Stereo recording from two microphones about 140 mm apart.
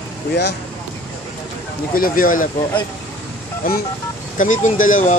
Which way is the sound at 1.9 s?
85° left.